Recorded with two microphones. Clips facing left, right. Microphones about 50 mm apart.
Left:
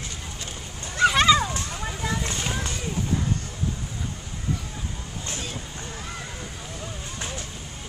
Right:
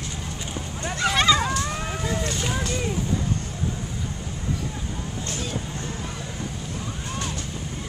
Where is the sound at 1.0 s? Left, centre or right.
Centre.